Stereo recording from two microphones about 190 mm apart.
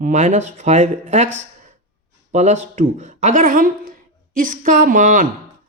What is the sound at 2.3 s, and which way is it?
Speech, 35° right (ahead or behind).